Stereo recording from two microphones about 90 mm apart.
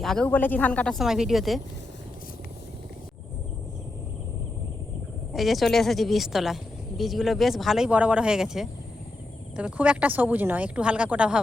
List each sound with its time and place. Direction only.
0.0 s speech: 5° left (ahead or behind)
0.3 s speech: 20° left (ahead or behind)
0.9 s speech: 5° right (ahead or behind)
5.3 s speech: centre (ahead or behind)
7.9 s speech: 15° right (ahead or behind)